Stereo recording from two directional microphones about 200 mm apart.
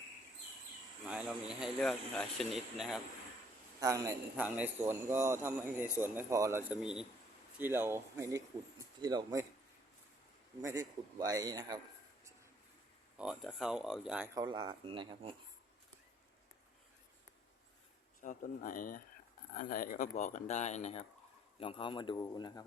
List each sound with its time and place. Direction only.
1.0 s speech: 5° right (ahead or behind)
3.8 s a man's voice: 15° right (ahead or behind)
10.6 s a man's voice: 15° right (ahead or behind)
13.1 s speech: 5° right (ahead or behind)
14.3 s speech: 20° right (ahead or behind)
18.2 s a man's voice: 40° left (ahead or behind); by 22.6 s 20° left (ahead or behind)